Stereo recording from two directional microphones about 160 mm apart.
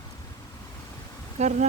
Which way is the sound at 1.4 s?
40° right (ahead or behind).